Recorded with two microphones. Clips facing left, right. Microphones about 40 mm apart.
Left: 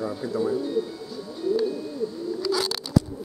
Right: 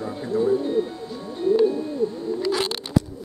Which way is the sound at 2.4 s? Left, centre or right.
Right.